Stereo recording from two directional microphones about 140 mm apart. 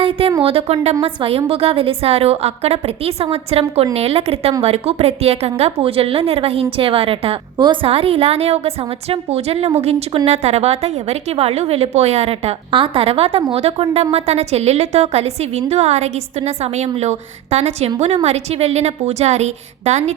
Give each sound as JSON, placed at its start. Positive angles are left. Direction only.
{"t": 0.0, "sound": "a woman's voice", "side_deg": -40}